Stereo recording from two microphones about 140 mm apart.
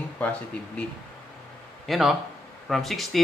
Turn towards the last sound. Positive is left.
turn(degrees=0)  # may be behind; listen again after turning